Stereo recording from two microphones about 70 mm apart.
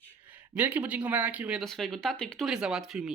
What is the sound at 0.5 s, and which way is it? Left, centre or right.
Speech, right.